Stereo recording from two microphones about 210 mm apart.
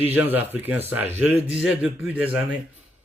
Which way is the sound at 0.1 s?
10° right (ahead or behind).